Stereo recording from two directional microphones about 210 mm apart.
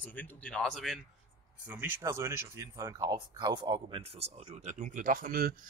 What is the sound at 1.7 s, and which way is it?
Speech, 10° right (ahead or behind).